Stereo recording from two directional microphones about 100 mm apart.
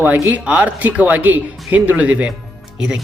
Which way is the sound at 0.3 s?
10° right (ahead or behind).